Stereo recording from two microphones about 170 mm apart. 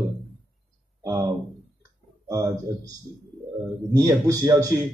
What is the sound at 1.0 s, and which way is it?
Speech, 20° right (ahead or behind).